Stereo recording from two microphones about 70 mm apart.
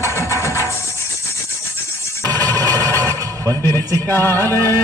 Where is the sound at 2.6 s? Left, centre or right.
Right.